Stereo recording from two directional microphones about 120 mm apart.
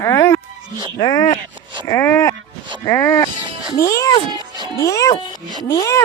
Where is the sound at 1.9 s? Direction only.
20° left (ahead or behind).